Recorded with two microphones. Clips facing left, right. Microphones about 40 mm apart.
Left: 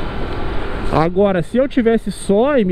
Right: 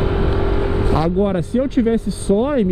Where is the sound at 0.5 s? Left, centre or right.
Centre.